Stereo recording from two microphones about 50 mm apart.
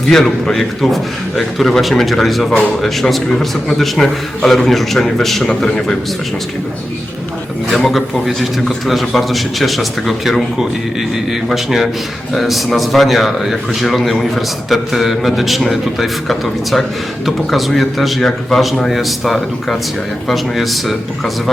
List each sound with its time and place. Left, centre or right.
0.1 s a man's voice: centre
5.6 s a man's voice: centre
7.8 s a man's voice: centre
11.4 s a man's voice: centre